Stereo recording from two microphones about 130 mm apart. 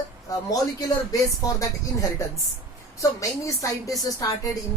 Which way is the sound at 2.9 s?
25° left (ahead or behind).